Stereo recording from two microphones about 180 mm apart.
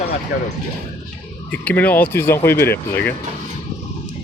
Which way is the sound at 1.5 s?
10° left (ahead or behind).